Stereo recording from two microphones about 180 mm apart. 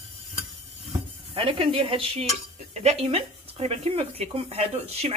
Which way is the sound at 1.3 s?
30° right (ahead or behind).